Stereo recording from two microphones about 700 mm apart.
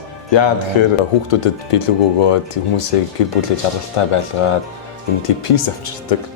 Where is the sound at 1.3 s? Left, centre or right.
Left.